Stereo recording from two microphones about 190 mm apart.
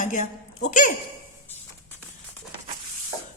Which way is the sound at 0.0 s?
40° left (ahead or behind).